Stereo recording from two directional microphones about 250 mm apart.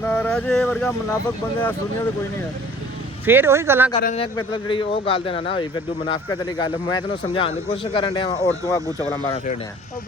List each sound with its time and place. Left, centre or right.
0.0 s speech: centre
3.2 s speech: centre
3.9 s speech: left